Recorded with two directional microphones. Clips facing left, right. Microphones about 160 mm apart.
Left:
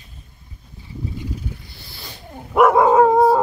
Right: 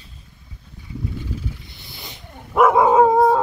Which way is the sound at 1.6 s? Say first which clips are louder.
Even; 20° right (ahead or behind).